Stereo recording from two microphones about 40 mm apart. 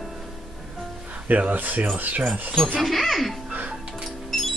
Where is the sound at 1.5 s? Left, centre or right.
Right.